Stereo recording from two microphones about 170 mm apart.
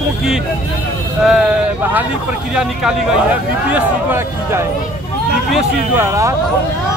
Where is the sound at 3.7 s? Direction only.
15° right (ahead or behind).